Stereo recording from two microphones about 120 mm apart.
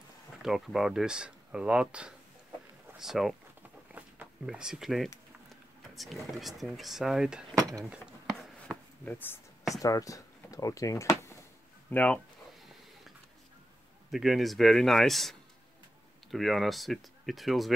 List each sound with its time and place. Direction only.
0.4 s speech: 5° right (ahead or behind)
3.9 s a sound: 10° right (ahead or behind)
5.9 s speech: centre (ahead or behind)
7.5 s speech: 30° right (ahead or behind)
7.8 s speech: 10° right (ahead or behind)
9.0 s speech: 15° left (ahead or behind)
9.8 s speech: 30° left (ahead or behind)
11.9 s speech: 10° left (ahead or behind)
14.1 s speech: centre (ahead or behind)